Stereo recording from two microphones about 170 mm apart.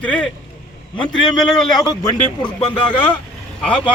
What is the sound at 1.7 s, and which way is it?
Speech, 25° left (ahead or behind).